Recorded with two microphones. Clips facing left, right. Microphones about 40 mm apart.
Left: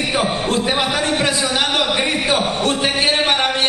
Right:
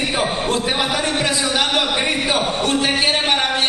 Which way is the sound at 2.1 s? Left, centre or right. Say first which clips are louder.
Left 1 dB; centre.